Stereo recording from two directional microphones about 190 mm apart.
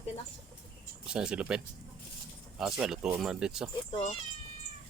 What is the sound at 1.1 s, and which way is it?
Speech, 5° right (ahead or behind).